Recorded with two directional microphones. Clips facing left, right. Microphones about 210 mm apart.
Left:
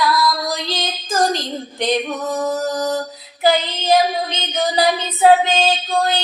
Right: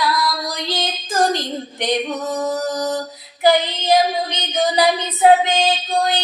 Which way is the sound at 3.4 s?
20° right (ahead or behind).